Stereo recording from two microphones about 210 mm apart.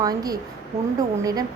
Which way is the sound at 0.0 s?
20° right (ahead or behind).